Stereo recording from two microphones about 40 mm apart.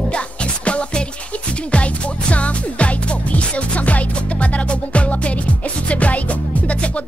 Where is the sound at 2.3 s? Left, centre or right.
Left.